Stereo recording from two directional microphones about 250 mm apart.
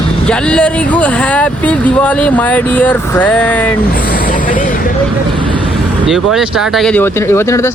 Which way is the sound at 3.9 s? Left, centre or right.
Left.